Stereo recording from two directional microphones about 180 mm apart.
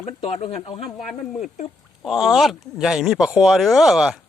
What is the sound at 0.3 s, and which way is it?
Speech, 35° left (ahead or behind).